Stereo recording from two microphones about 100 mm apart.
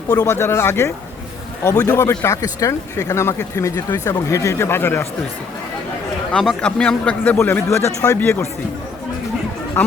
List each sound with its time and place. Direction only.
0.1 s speech: 35° left (ahead or behind)
0.3 s speech: 25° left (ahead or behind)
3.8 s speech: 40° left (ahead or behind); by 5.0 s 20° left (ahead or behind)
6.3 s a man's voice: 5° left (ahead or behind)
7.3 s speech: 25° left (ahead or behind)